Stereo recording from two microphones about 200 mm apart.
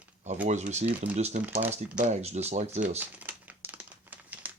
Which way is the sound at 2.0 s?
35° right (ahead or behind).